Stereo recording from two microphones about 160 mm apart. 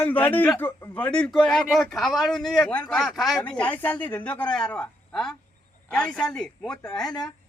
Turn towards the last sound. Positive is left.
turn(degrees=5)  # may be behind; listen again after turning